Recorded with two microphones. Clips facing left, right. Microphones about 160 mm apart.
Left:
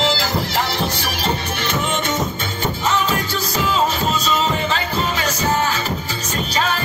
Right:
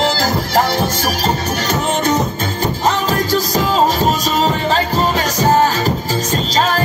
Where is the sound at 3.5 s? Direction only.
40° right (ahead or behind).